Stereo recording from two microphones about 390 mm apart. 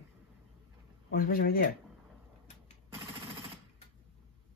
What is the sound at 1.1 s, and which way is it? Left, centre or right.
Speech, left.